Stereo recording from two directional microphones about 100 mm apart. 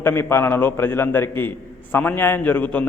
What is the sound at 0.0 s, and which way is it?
A man's voice, 25° left (ahead or behind).